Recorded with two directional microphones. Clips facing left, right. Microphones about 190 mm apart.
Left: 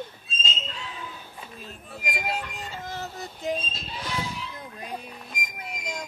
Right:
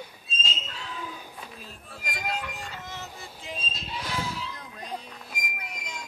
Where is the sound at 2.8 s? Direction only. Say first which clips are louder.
Left 5 dB; 35° left (ahead or behind).